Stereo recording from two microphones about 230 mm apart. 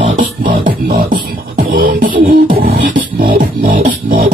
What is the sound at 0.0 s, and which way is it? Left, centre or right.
Beatboxing, right.